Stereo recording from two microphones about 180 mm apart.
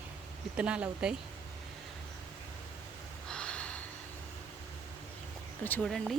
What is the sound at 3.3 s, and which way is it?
Gasp, 5° left (ahead or behind).